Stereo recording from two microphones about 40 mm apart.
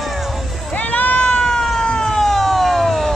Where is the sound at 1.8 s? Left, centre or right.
Left.